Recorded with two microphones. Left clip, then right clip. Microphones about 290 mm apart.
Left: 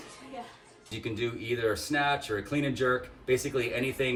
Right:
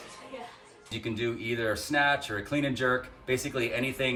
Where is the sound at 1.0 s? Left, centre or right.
Centre.